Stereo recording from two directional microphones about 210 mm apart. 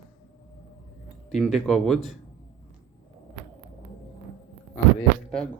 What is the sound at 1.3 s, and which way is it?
Speech, centre (ahead or behind).